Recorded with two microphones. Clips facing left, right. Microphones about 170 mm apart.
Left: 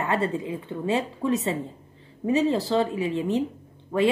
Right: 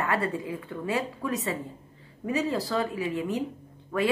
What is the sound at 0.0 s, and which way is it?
Speech, 25° left (ahead or behind).